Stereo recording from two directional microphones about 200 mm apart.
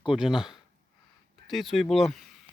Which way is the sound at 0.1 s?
Centre (ahead or behind).